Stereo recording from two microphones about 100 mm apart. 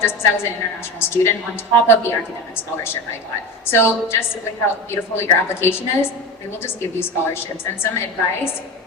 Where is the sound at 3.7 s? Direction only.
25° left (ahead or behind).